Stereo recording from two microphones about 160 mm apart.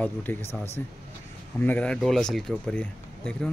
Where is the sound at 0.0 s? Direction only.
10° left (ahead or behind).